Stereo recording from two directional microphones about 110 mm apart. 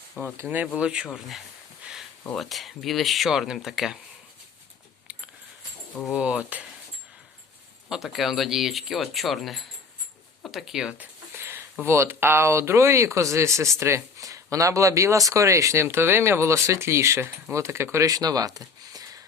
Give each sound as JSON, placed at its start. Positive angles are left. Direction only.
{"t": 0.4, "sound": "speech", "side_deg": -15}
{"t": 1.8, "sound": "a sound", "side_deg": -5}
{"t": 2.2, "sound": "speech", "side_deg": 5}
{"t": 6.1, "sound": "speech", "side_deg": -10}
{"t": 7.9, "sound": "speech", "side_deg": -5}